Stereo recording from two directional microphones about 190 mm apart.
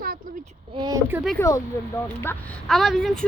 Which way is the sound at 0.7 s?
25° right (ahead or behind).